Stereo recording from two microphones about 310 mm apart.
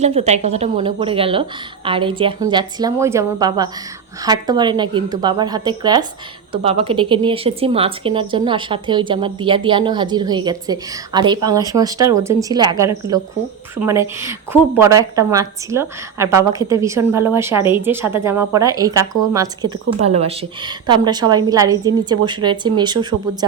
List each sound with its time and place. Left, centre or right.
0.0 s a woman's voice: right